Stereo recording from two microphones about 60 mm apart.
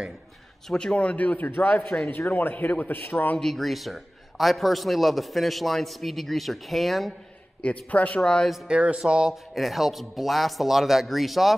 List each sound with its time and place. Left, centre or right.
0.7 s a man's voice: centre; by 3.3 s left
3.3 s a man's voice: centre
7.6 s a man's voice: left
8.2 s speech: centre
8.6 s a man's voice: centre